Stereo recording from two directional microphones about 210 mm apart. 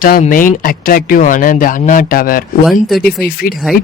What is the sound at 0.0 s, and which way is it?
Speech, 40° left (ahead or behind).